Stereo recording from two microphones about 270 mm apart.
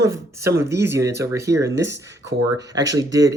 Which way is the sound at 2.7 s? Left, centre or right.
Centre.